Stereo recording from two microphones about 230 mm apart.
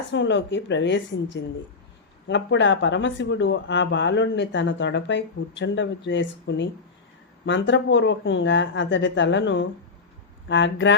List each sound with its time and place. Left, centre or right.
0.1 s speech: left